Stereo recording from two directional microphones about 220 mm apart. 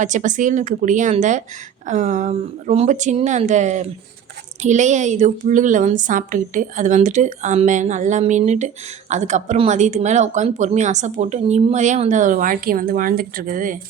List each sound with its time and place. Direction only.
0.0 s a woman's voice: 35° right (ahead or behind)